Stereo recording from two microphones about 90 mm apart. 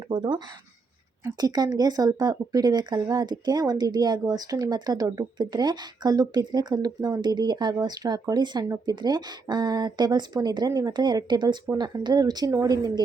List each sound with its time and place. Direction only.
0.1 s speech: 60° right (ahead or behind)
1.4 s speech: 45° right (ahead or behind)